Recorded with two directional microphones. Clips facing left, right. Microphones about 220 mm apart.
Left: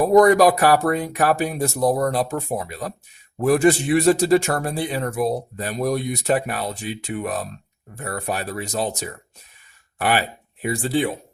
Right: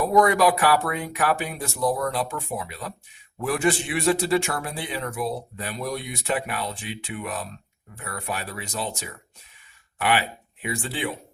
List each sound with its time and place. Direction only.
0.0 s a man's voice: 40° left (ahead or behind)